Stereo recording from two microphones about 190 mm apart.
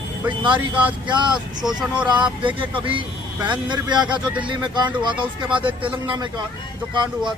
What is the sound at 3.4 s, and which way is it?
Speech, 25° right (ahead or behind).